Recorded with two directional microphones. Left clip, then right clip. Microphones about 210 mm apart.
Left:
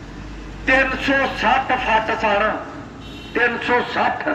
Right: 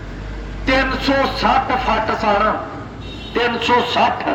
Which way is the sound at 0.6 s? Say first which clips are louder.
Even; 55° right (ahead or behind).